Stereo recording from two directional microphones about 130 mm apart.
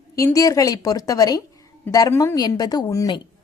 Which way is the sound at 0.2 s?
25° left (ahead or behind).